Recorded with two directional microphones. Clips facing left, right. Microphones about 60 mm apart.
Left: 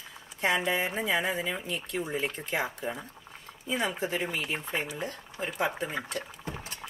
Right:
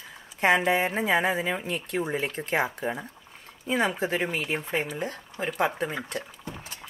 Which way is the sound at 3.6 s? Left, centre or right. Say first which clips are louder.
Right 5 dB; right.